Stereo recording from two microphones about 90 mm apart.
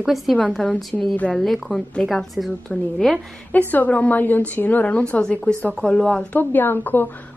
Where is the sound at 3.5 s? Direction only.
20° left (ahead or behind).